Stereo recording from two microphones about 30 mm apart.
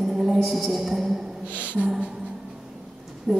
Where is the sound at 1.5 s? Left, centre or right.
Right.